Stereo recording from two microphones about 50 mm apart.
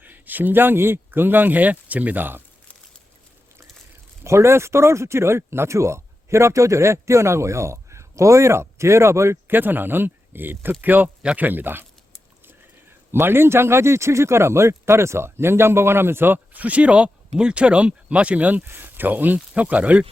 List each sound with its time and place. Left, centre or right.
0.0 s speech: right
4.2 s speech: right
9.5 s speech: right
13.1 s speech: right
18.7 s speech: right